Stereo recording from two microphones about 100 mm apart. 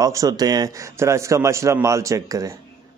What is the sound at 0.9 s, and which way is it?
A man's voice, 30° right (ahead or behind).